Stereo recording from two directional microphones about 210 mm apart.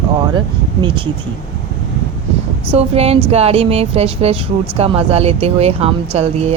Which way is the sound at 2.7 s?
30° right (ahead or behind).